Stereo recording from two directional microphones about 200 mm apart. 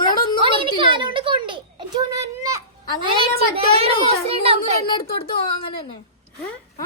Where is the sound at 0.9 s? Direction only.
25° right (ahead or behind).